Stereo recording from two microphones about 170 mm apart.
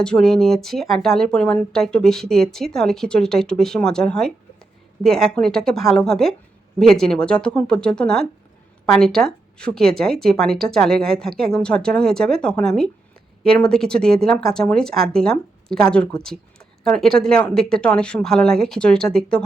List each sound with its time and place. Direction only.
0.0 s speech: 5° left (ahead or behind)